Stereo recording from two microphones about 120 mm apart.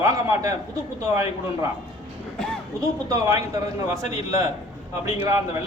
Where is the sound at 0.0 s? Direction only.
30° right (ahead or behind).